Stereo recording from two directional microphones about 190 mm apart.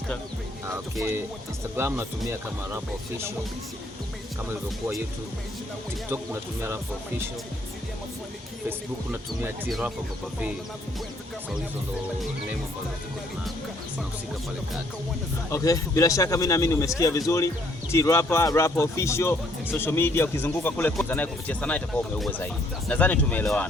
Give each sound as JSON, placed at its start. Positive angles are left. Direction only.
{"t": 1.7, "sound": "music", "side_deg": -15}
{"t": 15.4, "sound": "speech", "side_deg": 15}